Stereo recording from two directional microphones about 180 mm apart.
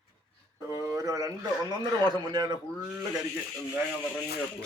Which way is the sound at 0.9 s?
15° right (ahead or behind).